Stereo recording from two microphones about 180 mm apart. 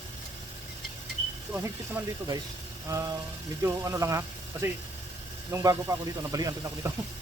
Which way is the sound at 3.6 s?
15° right (ahead or behind).